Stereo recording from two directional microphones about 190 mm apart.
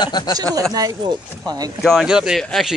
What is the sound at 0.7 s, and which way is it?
Speech, 20° right (ahead or behind).